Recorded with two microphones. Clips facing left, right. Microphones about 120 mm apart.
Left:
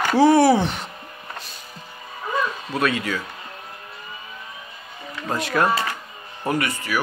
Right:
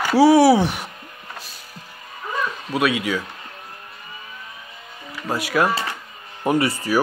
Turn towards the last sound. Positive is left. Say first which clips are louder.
# right 5 dB
turn(degrees=-35)  # may be behind; listen again after turning